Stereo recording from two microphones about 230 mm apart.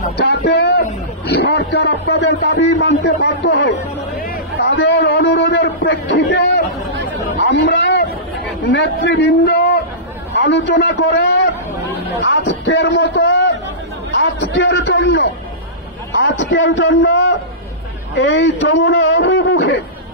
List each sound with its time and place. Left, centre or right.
0.0 s a man's voice: left